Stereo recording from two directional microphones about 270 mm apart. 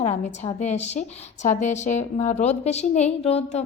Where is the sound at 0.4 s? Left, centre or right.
Left.